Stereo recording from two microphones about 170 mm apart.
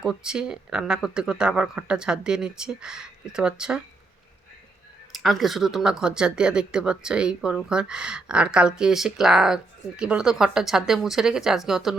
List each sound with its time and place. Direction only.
0.0 s speech: 5° right (ahead or behind)
5.1 s speech: centre (ahead or behind)